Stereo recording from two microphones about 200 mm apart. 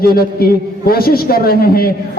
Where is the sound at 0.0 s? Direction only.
50° left (ahead or behind).